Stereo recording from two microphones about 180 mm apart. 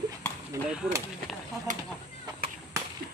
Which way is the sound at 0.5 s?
15° right (ahead or behind).